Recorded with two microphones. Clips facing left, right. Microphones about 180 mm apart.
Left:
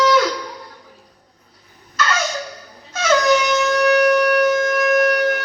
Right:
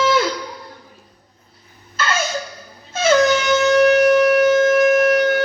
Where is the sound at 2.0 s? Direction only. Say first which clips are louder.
Left 1 dB; 25° right (ahead or behind).